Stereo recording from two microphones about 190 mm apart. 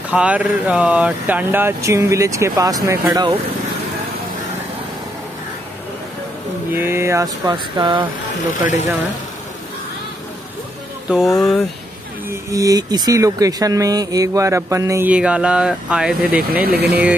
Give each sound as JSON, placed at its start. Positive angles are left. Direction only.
{"t": 0.1, "sound": "speech", "side_deg": -5}
{"t": 6.7, "sound": "speech", "side_deg": -10}
{"t": 11.1, "sound": "speech", "side_deg": 0}
{"t": 12.3, "sound": "speech", "side_deg": -15}
{"t": 16.6, "sound": "speech", "side_deg": -55}